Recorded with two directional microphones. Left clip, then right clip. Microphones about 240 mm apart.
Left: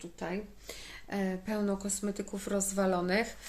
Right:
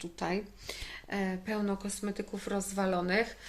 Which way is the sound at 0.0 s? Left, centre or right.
Right.